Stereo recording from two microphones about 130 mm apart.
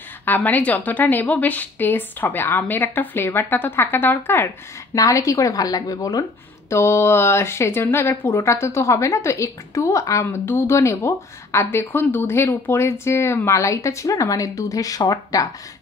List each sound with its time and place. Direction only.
0.2 s a woman's voice: 15° left (ahead or behind); by 15.4 s 30° left (ahead or behind)